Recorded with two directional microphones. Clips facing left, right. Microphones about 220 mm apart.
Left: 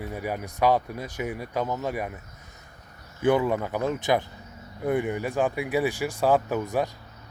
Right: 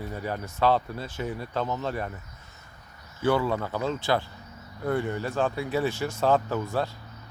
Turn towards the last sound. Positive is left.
turn(degrees=15)  # may be behind; listen again after turning